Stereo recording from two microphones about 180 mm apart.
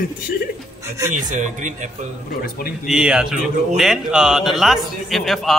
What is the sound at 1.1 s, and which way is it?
Speech, 45° right (ahead or behind).